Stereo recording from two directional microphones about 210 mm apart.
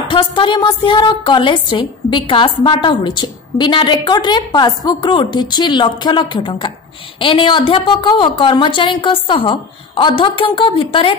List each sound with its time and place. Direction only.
0.1 s a woman's voice: 25° left (ahead or behind)